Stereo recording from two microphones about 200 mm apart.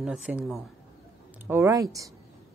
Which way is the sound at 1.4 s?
15° right (ahead or behind).